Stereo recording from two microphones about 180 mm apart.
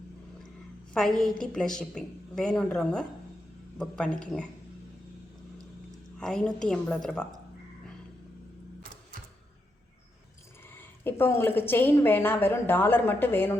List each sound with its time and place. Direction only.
0.9 s a woman's voice: 5° left (ahead or behind)
6.1 s a woman's voice: 5° left (ahead or behind)
10.8 s a woman's voice: 10° left (ahead or behind)